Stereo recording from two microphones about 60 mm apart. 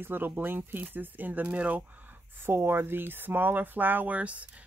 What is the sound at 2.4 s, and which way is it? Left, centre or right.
Speech, right.